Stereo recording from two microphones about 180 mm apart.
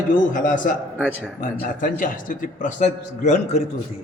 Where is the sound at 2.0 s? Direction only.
45° left (ahead or behind).